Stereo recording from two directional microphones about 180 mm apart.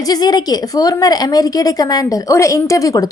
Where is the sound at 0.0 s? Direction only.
20° left (ahead or behind).